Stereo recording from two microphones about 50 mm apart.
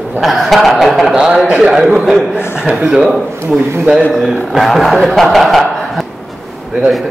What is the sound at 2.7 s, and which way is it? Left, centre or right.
Speech, centre.